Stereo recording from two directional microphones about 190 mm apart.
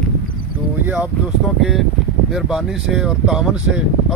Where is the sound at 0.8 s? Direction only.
10° right (ahead or behind).